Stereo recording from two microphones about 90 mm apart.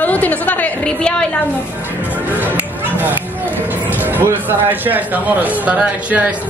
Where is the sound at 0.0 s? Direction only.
15° left (ahead or behind).